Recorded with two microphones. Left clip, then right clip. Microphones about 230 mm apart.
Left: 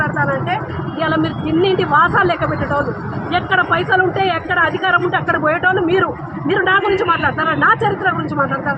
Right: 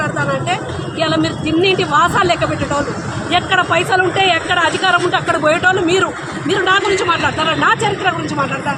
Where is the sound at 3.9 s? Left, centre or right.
Centre.